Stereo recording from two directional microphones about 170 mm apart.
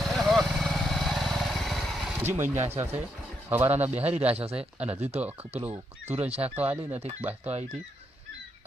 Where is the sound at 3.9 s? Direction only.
40° right (ahead or behind).